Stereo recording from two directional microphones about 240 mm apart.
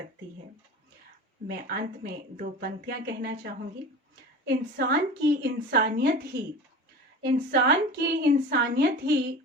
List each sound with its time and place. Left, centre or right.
1.5 s a woman's voice: right
4.4 s a woman's voice: right
7.3 s a woman's voice: right